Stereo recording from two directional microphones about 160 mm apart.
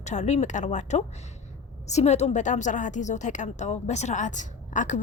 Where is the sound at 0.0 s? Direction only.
45° left (ahead or behind).